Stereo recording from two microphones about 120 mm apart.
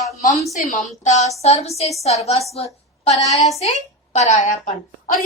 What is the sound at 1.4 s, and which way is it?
A woman's voice, 60° left (ahead or behind).